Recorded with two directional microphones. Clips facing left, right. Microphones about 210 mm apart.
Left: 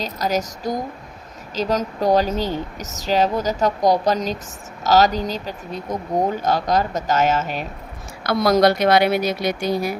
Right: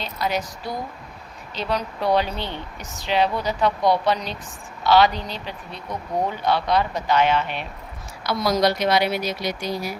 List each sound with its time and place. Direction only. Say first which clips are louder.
0.0 s speech: left 3 dB; 40° left (ahead or behind)
8.2 s speech: left 5 dB; 55° left (ahead or behind)